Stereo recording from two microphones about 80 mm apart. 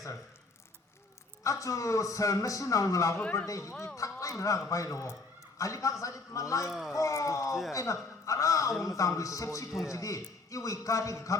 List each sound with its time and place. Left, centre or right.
1.5 s a man's voice: left
6.7 s speech: centre
6.9 s a man's voice: left